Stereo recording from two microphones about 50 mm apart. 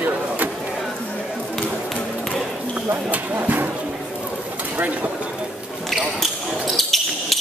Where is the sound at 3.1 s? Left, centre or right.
Right.